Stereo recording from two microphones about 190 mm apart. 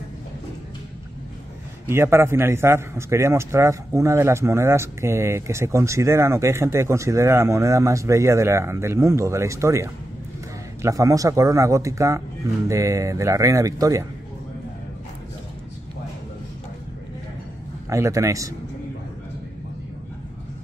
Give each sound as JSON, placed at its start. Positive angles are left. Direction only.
{"t": 1.9, "sound": "a man's voice", "side_deg": -15}
{"t": 17.8, "sound": "a man's voice", "side_deg": -15}